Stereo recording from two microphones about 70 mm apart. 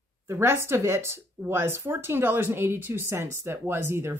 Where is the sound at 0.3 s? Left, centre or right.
Right.